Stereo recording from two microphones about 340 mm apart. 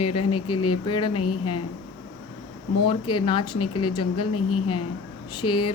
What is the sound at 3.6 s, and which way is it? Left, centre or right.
Speech, left.